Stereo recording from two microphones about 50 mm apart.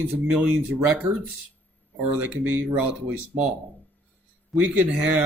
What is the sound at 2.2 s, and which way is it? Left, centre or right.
Speech, right.